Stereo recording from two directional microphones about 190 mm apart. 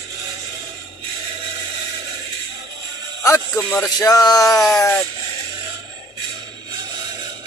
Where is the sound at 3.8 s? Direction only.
20° left (ahead or behind).